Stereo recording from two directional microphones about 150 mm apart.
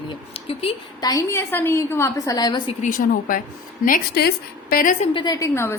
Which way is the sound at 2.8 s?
65° left (ahead or behind).